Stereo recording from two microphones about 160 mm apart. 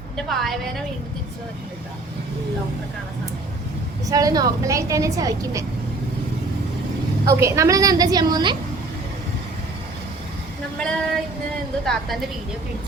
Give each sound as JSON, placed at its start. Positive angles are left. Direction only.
{"t": 0.2, "sound": "a woman's voice", "side_deg": 0}
{"t": 4.1, "sound": "a woman's voice", "side_deg": -20}
{"t": 7.3, "sound": "a woman's voice", "side_deg": -20}
{"t": 10.8, "sound": "a woman's voice", "side_deg": 5}